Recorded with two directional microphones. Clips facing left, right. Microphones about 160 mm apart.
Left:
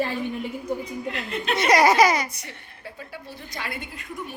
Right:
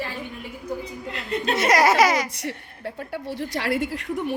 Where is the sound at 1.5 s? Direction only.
Centre (ahead or behind).